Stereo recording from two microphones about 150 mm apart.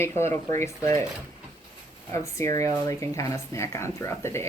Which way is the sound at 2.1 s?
20° left (ahead or behind).